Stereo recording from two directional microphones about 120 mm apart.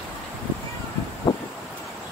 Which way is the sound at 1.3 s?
50° left (ahead or behind).